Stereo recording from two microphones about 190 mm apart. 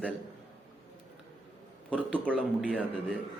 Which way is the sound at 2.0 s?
10° right (ahead or behind).